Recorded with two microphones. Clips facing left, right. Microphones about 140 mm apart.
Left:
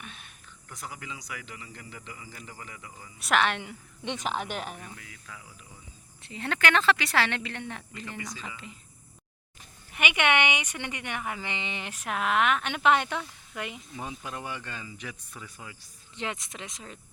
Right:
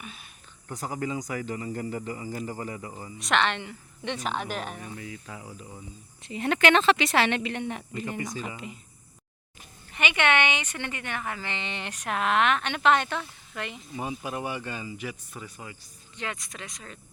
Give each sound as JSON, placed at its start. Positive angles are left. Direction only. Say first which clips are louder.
{"t": 0.0, "sound": "a sound", "louder": "right 2 dB", "side_deg": -5}
{"t": 0.7, "sound": "speech", "louder": "right 10 dB", "side_deg": -40}
{"t": 3.2, "sound": "speech", "louder": "even", "side_deg": 5}
{"t": 4.8, "sound": "speech", "louder": "right 7 dB", "side_deg": -25}
{"t": 6.2, "sound": "speech", "louder": "right 5 dB", "side_deg": -15}
{"t": 9.9, "sound": "speech", "louder": "right 1 dB", "side_deg": 10}
{"t": 13.9, "sound": "speech", "louder": "right 5 dB", "side_deg": -5}
{"t": 16.1, "sound": "speech", "louder": "left 1 dB", "side_deg": 20}